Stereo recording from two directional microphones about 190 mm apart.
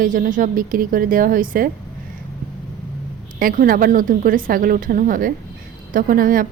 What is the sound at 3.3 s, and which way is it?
A woman's voice, 45° right (ahead or behind).